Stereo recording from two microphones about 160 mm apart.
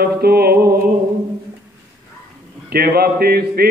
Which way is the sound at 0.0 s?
75° right (ahead or behind).